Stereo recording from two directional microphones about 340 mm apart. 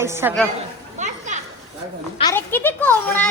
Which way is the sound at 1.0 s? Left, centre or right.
Right.